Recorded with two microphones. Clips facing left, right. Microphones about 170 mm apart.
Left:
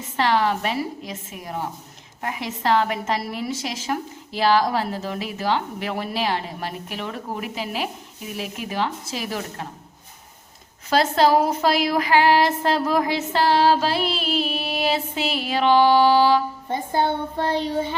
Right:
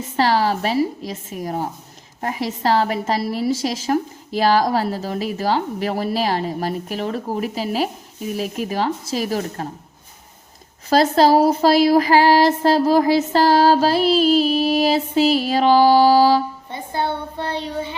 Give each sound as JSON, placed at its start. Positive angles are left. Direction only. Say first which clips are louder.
{"t": 0.2, "sound": "a woman's voice", "louder": "right 3 dB", "side_deg": -35}
{"t": 10.8, "sound": "a woman's voice", "louder": "right 4 dB", "side_deg": -40}
{"t": 17.3, "sound": "child singing", "louder": "left 3 dB", "side_deg": 45}